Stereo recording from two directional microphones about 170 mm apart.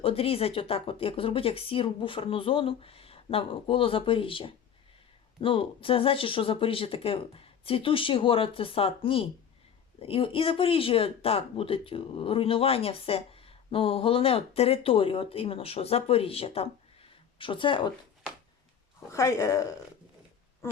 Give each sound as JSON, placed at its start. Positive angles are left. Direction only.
{"t": 0.0, "sound": "speech", "side_deg": 35}
{"t": 18.9, "sound": "speech", "side_deg": 15}